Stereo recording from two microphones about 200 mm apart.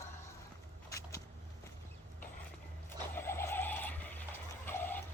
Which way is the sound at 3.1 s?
10° left (ahead or behind).